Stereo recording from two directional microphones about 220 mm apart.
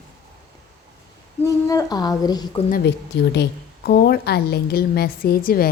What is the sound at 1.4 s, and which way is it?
A woman's voice, 15° left (ahead or behind).